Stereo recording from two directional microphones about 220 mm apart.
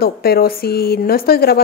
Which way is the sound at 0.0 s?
45° left (ahead or behind).